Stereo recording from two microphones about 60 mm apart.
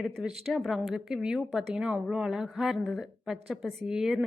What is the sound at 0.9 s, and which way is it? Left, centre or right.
A woman's voice, centre.